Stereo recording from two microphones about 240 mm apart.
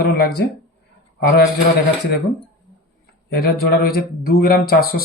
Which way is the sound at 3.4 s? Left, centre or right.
Left.